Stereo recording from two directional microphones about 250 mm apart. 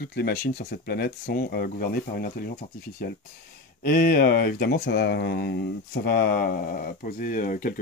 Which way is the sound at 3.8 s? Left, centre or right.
Left.